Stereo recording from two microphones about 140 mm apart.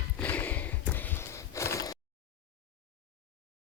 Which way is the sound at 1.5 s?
20° left (ahead or behind).